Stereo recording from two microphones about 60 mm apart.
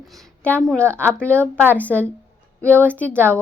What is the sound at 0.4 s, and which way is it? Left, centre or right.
A woman's voice, left.